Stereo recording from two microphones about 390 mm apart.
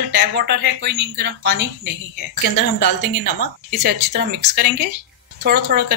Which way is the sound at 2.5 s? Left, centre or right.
Left.